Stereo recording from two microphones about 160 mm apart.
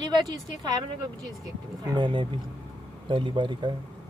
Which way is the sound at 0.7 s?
25° right (ahead or behind).